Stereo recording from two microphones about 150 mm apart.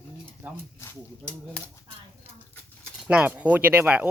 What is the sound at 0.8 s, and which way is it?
Speech, 20° left (ahead or behind).